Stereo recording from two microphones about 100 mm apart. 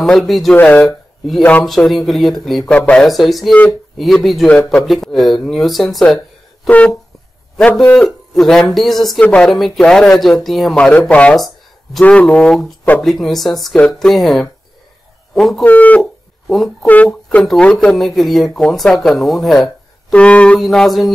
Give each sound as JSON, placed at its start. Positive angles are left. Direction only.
{"t": 0.0, "sound": "speech", "side_deg": 0}
{"t": 0.6, "sound": "speech", "side_deg": 15}
{"t": 0.8, "sound": "a sound", "side_deg": 0}
{"t": 1.9, "sound": "a man's voice", "side_deg": 0}
{"t": 9.2, "sound": "speech", "side_deg": 15}
{"t": 10.8, "sound": "speech", "side_deg": 15}
{"t": 11.3, "sound": "a sound", "side_deg": 0}
{"t": 12.0, "sound": "a man's voice", "side_deg": 15}
{"t": 15.6, "sound": "speech", "side_deg": 15}
{"t": 16.0, "sound": "a sound", "side_deg": 0}
{"t": 16.8, "sound": "speech", "side_deg": 15}
{"t": 20.1, "sound": "speech", "side_deg": 10}